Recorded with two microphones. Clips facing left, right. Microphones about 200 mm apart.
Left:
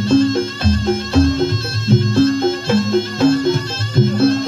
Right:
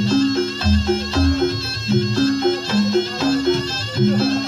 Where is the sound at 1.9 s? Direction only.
50° left (ahead or behind).